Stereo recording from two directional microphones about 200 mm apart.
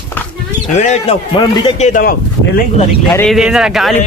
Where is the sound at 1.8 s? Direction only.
40° left (ahead or behind).